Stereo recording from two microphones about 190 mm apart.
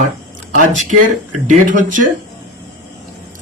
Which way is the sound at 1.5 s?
45° right (ahead or behind).